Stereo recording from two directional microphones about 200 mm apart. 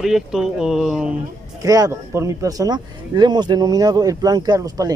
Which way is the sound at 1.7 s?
15° right (ahead or behind).